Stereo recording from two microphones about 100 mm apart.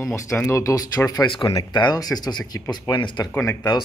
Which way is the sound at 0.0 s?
30° left (ahead or behind).